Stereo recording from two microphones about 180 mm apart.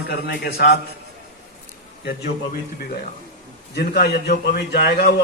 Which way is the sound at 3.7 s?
65° left (ahead or behind).